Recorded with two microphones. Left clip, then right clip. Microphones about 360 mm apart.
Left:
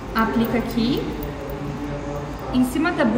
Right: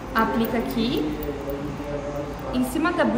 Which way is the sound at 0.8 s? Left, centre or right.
Centre.